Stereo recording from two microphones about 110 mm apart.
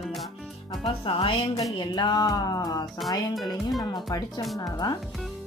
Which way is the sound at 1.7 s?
40° left (ahead or behind).